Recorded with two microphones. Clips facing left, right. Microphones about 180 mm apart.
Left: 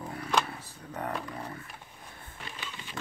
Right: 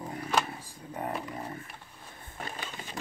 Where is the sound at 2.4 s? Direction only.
45° right (ahead or behind).